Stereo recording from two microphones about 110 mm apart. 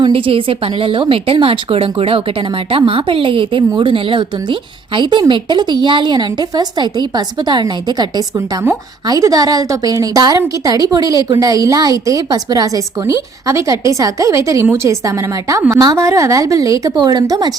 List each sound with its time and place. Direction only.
0.0 s a woman's voice: 55° right (ahead or behind)
9.0 s a woman's voice: 30° right (ahead or behind)